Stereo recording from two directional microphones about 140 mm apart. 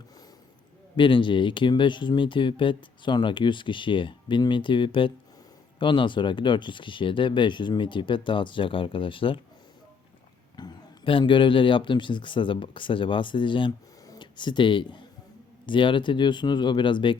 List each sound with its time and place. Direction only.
0.9 s speech: 35° left (ahead or behind)
10.6 s speech: 35° left (ahead or behind)